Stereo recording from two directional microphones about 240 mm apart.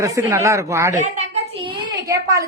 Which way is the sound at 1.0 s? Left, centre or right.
Right.